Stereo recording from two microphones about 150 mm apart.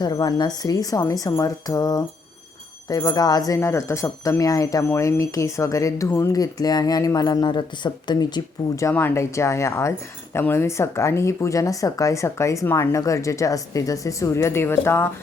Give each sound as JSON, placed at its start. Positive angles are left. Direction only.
{"t": 0.0, "sound": "speech", "side_deg": 30}